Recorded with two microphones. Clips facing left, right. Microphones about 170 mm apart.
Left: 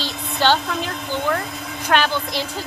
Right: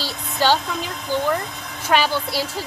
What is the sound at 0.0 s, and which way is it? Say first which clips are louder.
A woman's voice: left 1 dB; 10° right (ahead or behind).